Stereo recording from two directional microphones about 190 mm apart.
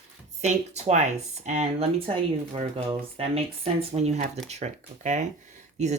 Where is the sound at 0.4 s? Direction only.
35° right (ahead or behind).